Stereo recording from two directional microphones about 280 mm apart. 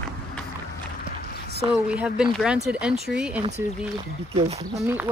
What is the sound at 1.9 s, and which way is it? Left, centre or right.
Speech, centre.